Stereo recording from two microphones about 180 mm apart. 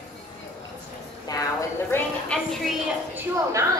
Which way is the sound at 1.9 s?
5° left (ahead or behind).